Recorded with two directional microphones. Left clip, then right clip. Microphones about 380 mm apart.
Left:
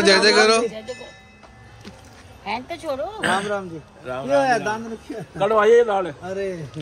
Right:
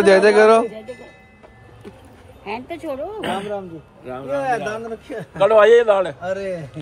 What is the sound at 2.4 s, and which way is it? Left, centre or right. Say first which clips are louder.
Speech: left 1 dB; centre.